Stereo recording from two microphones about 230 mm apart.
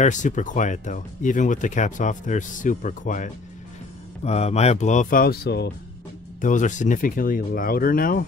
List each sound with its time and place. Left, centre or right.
0.0 s speech: left
6.4 s speech: left